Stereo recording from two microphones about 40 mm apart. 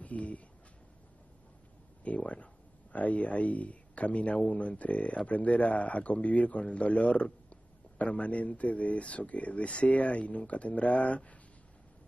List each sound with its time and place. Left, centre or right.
0.0 s speech: left
2.0 s speech: left